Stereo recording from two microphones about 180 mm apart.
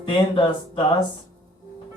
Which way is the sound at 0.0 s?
25° left (ahead or behind).